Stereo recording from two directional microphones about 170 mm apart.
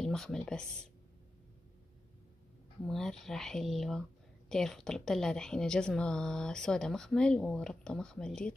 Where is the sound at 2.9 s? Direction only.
Centre (ahead or behind).